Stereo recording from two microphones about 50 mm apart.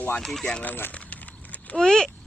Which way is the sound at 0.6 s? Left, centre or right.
Left.